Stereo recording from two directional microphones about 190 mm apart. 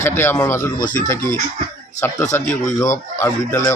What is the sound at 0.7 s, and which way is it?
Speech, 45° left (ahead or behind).